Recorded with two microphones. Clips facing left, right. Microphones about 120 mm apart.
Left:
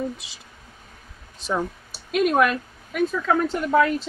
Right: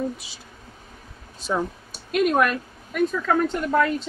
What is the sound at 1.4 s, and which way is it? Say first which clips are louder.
Speech: even; centre (ahead or behind).